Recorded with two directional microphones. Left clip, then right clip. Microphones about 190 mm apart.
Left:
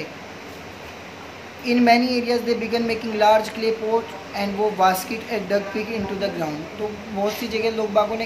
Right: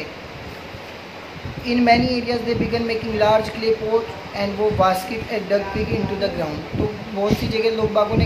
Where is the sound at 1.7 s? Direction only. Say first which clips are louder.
Right 1 dB; 15° left (ahead or behind).